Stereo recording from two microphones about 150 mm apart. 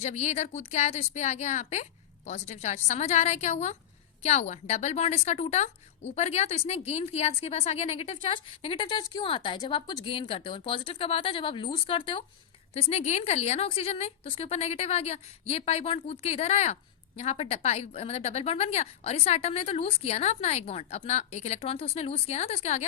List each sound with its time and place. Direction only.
0.0 s a woman's voice: 50° left (ahead or behind); by 12.2 s 35° left (ahead or behind)
12.7 s a woman's voice: 45° left (ahead or behind)